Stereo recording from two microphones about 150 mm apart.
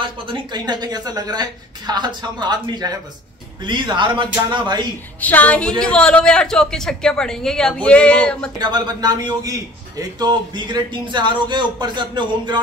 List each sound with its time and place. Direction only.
0.0 s speech: 30° right (ahead or behind)
5.2 s a man's voice: 10° left (ahead or behind)
8.5 s speech: 30° right (ahead or behind)